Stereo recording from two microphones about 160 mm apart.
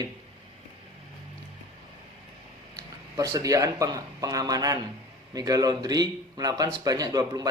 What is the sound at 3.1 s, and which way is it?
Speech, 20° right (ahead or behind).